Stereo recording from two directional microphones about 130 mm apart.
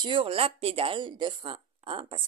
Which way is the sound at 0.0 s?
40° right (ahead or behind).